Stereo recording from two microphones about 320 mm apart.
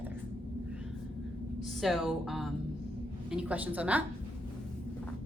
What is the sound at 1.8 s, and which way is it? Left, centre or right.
A woman's voice, centre.